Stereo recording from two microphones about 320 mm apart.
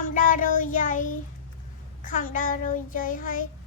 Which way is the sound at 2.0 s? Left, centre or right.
Left.